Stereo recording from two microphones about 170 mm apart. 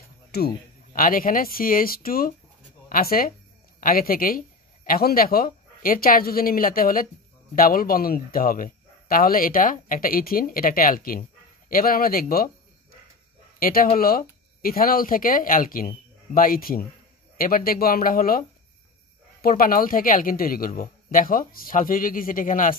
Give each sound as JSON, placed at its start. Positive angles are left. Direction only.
{"t": 0.3, "sound": "speech", "side_deg": 70}
{"t": 0.9, "sound": "speech", "side_deg": 55}
{"t": 13.6, "sound": "speech", "side_deg": 60}
{"t": 19.4, "sound": "speech", "side_deg": 60}